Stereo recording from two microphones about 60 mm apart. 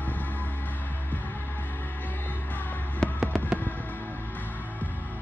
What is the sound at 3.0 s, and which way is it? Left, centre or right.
Fireworks, centre.